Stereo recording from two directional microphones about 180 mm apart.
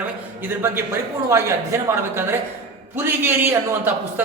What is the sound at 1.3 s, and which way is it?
A man's voice, 15° right (ahead or behind).